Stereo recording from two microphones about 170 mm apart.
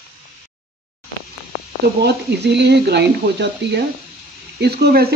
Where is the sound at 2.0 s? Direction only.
80° right.